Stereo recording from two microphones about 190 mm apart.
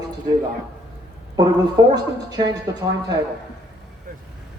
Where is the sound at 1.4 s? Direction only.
20° right (ahead or behind).